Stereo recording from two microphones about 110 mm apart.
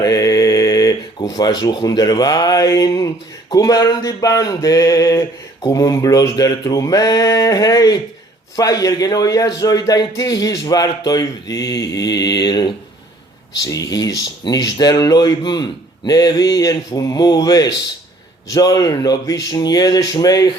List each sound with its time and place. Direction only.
0.0 s a man's voice: 35° left (ahead or behind)